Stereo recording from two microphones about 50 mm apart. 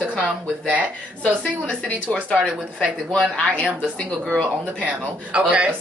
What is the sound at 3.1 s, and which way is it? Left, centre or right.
Speech, left.